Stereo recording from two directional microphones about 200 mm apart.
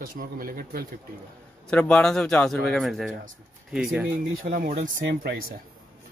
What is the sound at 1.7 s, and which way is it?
A man's voice, 5° left (ahead or behind).